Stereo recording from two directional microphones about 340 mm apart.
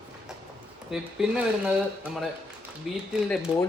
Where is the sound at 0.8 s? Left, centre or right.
Centre.